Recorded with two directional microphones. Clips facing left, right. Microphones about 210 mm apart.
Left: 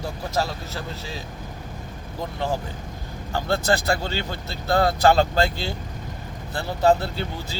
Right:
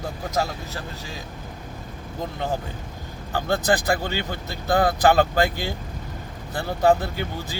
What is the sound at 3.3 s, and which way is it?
Speech, 15° right (ahead or behind).